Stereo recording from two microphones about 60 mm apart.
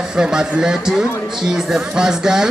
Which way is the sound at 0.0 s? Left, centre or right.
Centre.